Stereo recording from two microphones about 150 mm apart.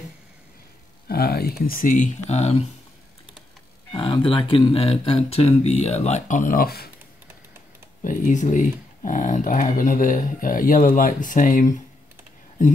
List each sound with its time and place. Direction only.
1.0 s speech: 90° left
1.7 s speech: 65° left (ahead or behind); by 2.6 s 45° left (ahead or behind)
3.9 s speech: 30° left (ahead or behind); by 6.9 s 85° left
8.0 s speech: 60° left (ahead or behind)